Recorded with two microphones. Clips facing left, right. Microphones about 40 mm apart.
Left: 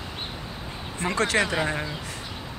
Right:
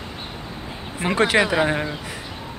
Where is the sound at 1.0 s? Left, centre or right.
Right.